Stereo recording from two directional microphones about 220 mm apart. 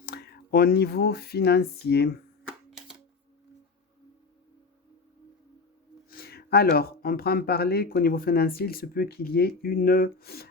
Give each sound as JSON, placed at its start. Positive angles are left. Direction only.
{"t": 0.0, "sound": "speech", "side_deg": 45}
{"t": 2.4, "sound": "a sound", "side_deg": 0}
{"t": 6.1, "sound": "speech", "side_deg": 45}